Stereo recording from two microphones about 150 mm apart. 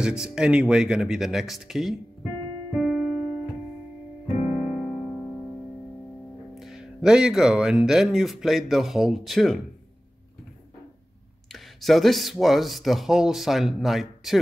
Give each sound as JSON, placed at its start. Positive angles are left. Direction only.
{"t": 0.0, "sound": "speech", "side_deg": -5}
{"t": 2.7, "sound": "keyboard", "side_deg": -5}
{"t": 4.6, "sound": "music", "side_deg": -5}
{"t": 6.5, "sound": "speech", "side_deg": 0}
{"t": 11.5, "sound": "speech", "side_deg": 0}